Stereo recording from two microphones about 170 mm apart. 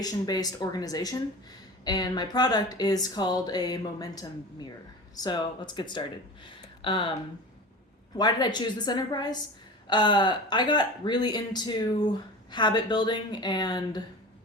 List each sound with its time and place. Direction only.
0.0 s speech: 25° left (ahead or behind)
8.1 s speech: 25° left (ahead or behind)